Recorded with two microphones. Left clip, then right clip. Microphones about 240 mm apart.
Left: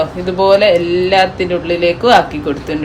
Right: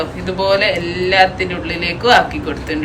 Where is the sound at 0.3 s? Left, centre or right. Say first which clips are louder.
Left 5 dB; left.